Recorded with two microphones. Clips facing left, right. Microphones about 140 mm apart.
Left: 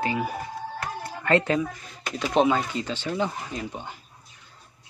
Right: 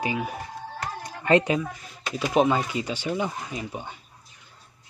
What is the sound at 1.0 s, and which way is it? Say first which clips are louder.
Music: right 2 dB; 15° right (ahead or behind).